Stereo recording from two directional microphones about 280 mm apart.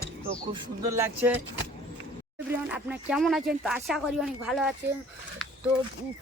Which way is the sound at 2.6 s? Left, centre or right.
Centre.